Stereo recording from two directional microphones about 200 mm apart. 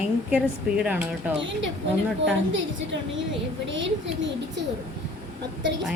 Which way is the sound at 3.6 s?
70° right (ahead or behind).